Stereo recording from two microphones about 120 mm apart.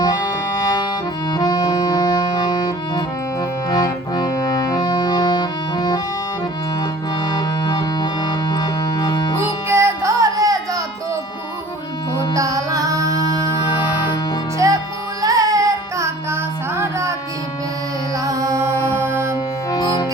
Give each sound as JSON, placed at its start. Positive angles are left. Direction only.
{"t": 0.0, "sound": "music", "side_deg": 30}
{"t": 7.3, "sound": "music", "side_deg": 35}
{"t": 9.6, "sound": "music", "side_deg": -20}
{"t": 12.3, "sound": "music", "side_deg": -30}
{"t": 13.4, "sound": "music", "side_deg": 40}
{"t": 14.6, "sound": "music", "side_deg": -25}
{"t": 18.2, "sound": "music", "side_deg": -30}
{"t": 19.7, "sound": "music", "side_deg": 30}